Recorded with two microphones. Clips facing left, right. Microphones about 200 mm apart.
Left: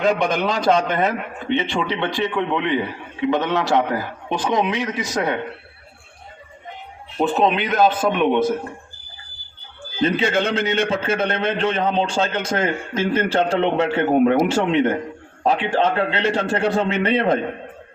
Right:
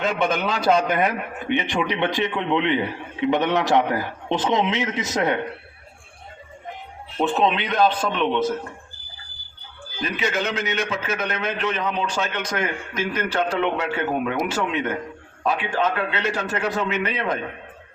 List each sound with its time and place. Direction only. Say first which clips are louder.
0.0 s a man's voice: left 3 dB; centre (ahead or behind); by 5.4 s 20° right (ahead or behind)
7.2 s a man's voice: left 2 dB; centre (ahead or behind)
10.0 s a man's voice: left 6 dB; 30° left (ahead or behind)